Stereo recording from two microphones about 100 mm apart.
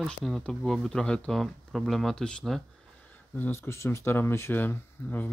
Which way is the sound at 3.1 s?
20° left (ahead or behind).